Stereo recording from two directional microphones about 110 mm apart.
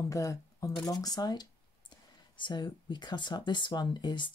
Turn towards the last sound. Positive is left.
turn(degrees=45)  # may be behind; listen again after turning